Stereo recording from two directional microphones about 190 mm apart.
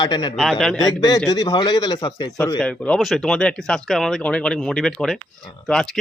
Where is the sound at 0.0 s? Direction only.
25° left (ahead or behind).